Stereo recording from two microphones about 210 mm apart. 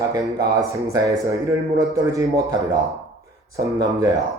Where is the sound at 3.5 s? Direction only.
15° right (ahead or behind).